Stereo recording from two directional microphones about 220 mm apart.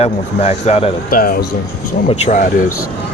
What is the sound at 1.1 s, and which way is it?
Speech, 40° left (ahead or behind).